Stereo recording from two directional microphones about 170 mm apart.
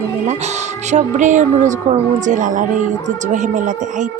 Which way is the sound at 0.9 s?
45° right (ahead or behind).